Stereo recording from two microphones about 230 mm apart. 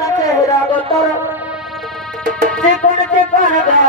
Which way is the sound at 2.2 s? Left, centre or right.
Right.